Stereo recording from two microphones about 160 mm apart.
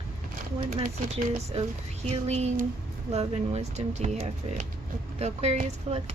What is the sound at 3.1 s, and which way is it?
Speech, 40° right (ahead or behind).